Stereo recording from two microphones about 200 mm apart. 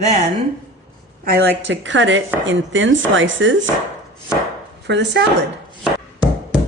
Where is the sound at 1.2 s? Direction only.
50° right (ahead or behind).